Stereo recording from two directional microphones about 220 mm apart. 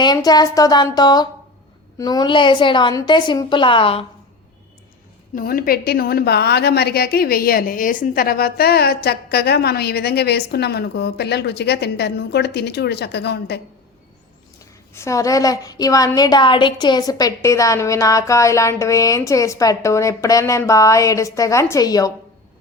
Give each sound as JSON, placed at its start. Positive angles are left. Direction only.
{"t": 0.0, "sound": "a woman's voice", "side_deg": 20}
{"t": 5.3, "sound": "a woman's voice", "side_deg": 40}
{"t": 14.9, "sound": "a woman's voice", "side_deg": 15}